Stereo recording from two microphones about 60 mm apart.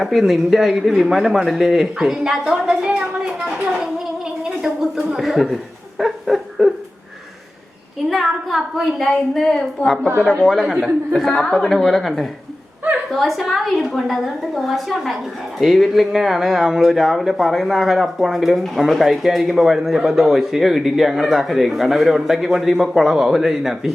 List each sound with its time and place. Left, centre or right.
0.0 s a woman's voice: centre
4.4 s gargling: centre
5.0 s speech: centre
6.0 s a sound: centre
8.1 s speech: centre
10.6 s speech: centre
11.3 s a woman's voice: centre
11.7 s speech: centre